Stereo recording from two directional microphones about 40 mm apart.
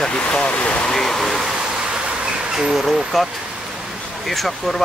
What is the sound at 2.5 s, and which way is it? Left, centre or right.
Speech, centre.